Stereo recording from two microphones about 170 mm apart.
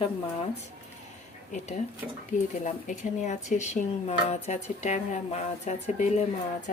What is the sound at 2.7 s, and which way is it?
Speech, 45° left (ahead or behind).